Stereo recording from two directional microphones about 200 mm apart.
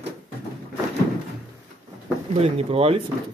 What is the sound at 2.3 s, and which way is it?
Speech, 30° right (ahead or behind).